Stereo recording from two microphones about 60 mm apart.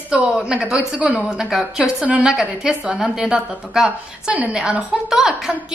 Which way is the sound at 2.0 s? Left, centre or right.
Right.